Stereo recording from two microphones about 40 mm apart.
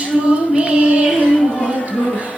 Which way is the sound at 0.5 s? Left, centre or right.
Right.